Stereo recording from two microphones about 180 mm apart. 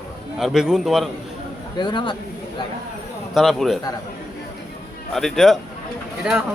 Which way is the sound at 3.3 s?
Centre (ahead or behind).